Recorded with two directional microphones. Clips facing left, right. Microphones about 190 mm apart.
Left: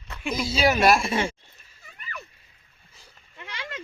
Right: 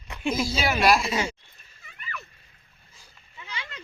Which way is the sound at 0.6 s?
45° left (ahead or behind).